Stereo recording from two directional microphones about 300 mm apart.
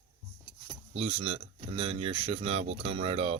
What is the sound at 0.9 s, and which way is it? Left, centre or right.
Speech, centre.